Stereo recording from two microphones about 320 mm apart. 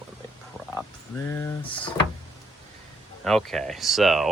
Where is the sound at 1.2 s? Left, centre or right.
Centre.